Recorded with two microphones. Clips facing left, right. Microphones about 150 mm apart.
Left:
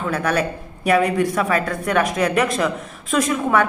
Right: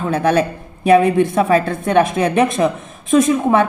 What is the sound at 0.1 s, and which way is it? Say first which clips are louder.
A woman's voice: right 6 dB; 25° right (ahead or behind).